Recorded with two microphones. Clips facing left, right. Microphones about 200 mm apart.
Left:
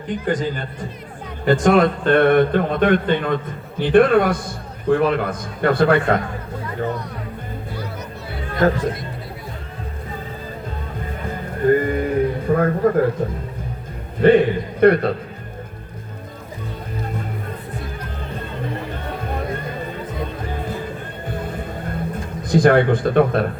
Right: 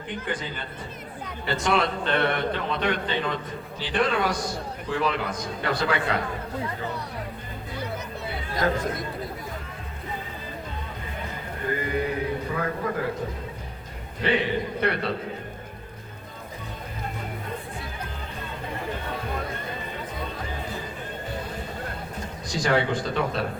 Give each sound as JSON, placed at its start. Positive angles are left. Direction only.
{"t": 0.3, "sound": "a man's voice", "side_deg": 40}
{"t": 11.3, "sound": "a man's voice", "side_deg": 50}
{"t": 14.2, "sound": "a man's voice", "side_deg": 50}
{"t": 22.4, "sound": "speech", "side_deg": 55}